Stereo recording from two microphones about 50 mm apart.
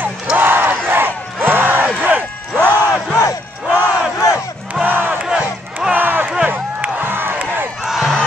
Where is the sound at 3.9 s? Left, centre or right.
Centre.